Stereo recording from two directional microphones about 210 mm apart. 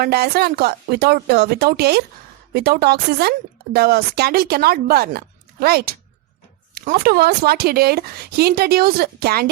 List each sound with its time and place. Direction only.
0.0 s a woman's voice: 50° right (ahead or behind)